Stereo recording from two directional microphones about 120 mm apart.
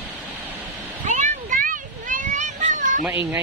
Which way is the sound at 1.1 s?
90° right.